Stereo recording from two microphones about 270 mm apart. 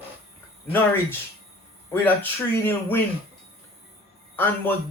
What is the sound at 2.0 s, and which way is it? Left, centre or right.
Speech, centre.